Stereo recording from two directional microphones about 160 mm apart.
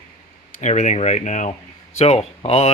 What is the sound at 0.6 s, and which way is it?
Speech, 50° left (ahead or behind).